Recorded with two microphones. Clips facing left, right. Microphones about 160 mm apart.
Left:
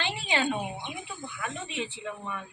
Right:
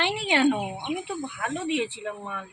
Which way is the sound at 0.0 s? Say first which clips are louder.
Right 7 dB; 65° right (ahead or behind).